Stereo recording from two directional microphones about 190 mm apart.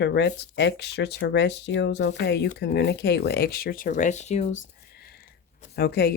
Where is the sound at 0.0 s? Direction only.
65° left (ahead or behind).